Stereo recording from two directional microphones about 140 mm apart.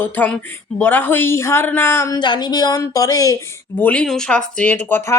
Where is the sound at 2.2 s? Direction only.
30° left (ahead or behind).